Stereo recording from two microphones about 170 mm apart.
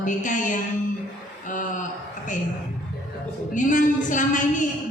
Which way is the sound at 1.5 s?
50° left (ahead or behind).